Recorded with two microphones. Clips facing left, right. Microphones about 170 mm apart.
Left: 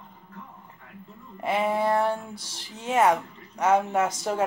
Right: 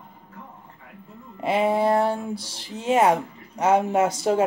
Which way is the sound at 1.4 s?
30° right (ahead or behind).